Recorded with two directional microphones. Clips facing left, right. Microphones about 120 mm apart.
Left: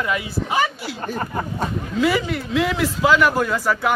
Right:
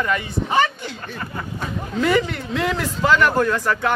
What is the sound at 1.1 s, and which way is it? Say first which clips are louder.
Speech: left 8 dB; 35° left (ahead or behind).